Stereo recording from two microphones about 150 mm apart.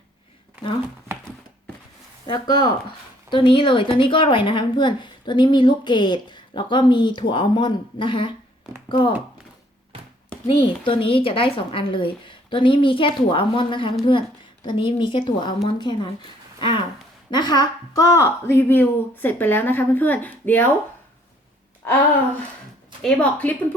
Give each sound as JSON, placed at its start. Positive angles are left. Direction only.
{"t": 2.2, "sound": "a woman's voice", "side_deg": 30}
{"t": 10.4, "sound": "a woman's voice", "side_deg": 35}
{"t": 17.3, "sound": "a woman's voice", "side_deg": 30}
{"t": 23.0, "sound": "a woman's voice", "side_deg": 10}